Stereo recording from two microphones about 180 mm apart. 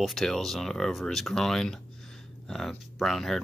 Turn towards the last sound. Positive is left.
turn(degrees=0)  # may be behind; listen again after turning